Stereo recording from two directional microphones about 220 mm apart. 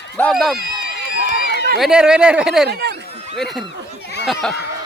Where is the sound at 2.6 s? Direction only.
50° right (ahead or behind).